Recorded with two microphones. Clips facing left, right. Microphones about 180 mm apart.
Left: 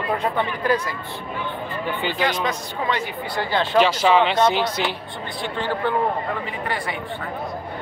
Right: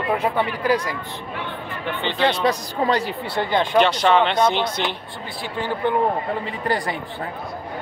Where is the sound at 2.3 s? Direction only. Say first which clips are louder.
Right 4 dB; 35° right (ahead or behind).